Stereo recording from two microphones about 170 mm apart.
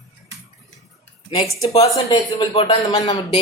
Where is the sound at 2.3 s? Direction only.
30° left (ahead or behind).